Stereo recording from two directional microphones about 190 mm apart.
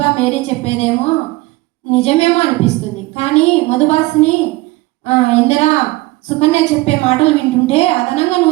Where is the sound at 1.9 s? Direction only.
35° left (ahead or behind).